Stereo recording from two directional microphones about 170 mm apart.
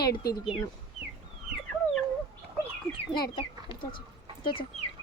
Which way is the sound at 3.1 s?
25° left (ahead or behind).